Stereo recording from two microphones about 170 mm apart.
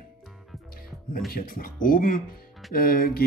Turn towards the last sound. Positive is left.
turn(degrees=60)  # may be behind; listen again after turning